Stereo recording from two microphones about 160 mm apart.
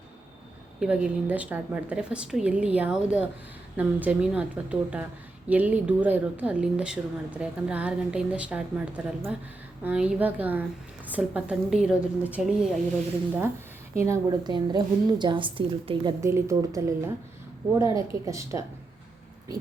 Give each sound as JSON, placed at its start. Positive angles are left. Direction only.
{"t": 0.8, "sound": "a woman's voice", "side_deg": -5}
{"t": 13.9, "sound": "a woman's voice", "side_deg": -20}
{"t": 16.2, "sound": "a woman's voice", "side_deg": -20}